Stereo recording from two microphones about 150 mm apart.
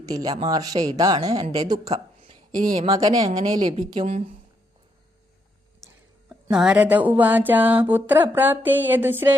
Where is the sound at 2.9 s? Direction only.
25° right (ahead or behind).